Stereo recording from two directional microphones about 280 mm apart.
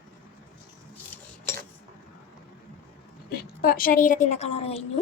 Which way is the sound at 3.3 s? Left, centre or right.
Left.